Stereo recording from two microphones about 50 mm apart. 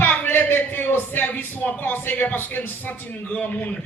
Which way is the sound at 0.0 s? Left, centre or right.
Left.